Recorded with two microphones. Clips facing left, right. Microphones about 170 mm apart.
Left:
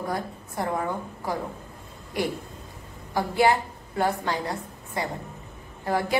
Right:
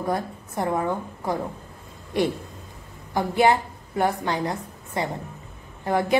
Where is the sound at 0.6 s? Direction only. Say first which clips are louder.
Right 3 dB; 20° right (ahead or behind).